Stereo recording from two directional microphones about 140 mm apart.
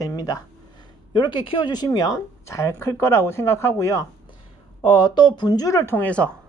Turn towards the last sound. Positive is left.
turn(degrees=10)  # may be behind; listen again after turning